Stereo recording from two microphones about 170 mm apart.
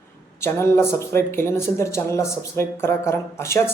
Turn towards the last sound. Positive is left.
turn(degrees=15)  # may be behind; listen again after turning